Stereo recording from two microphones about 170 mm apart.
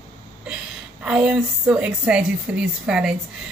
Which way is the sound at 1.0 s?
5° right (ahead or behind).